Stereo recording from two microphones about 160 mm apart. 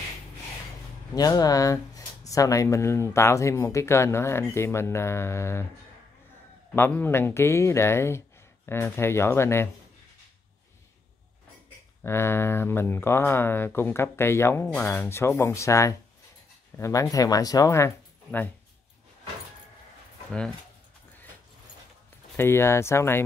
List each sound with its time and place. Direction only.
1.1 s speech: 25° left (ahead or behind)
6.7 s speech: 15° left (ahead or behind)
12.0 s speech: 15° left (ahead or behind)
22.4 s speech: 15° left (ahead or behind)